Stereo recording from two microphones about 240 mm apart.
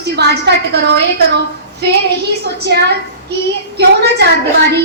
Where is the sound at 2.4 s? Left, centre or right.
Right.